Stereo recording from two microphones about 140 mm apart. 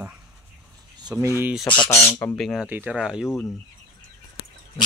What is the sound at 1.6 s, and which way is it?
Speech, 35° left (ahead or behind).